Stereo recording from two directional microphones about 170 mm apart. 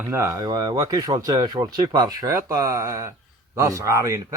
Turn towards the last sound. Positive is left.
turn(degrees=-15)  # may be behind; listen again after turning